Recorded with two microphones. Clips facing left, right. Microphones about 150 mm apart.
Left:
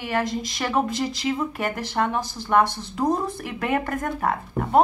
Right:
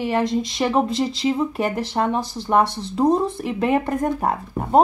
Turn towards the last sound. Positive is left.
turn(degrees=-30)  # may be behind; listen again after turning